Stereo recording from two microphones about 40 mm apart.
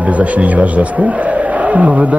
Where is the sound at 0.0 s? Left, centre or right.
Right.